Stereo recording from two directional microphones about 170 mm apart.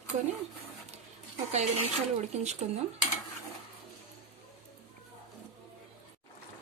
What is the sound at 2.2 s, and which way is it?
Speech, 40° right (ahead or behind).